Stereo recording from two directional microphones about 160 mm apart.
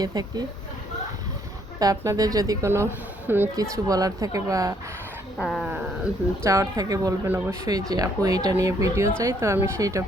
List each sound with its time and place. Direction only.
0.0 s speech: 25° right (ahead or behind)
1.8 s speech: 20° right (ahead or behind)
5.4 s speech: centre (ahead or behind)
6.4 s speech: 20° right (ahead or behind)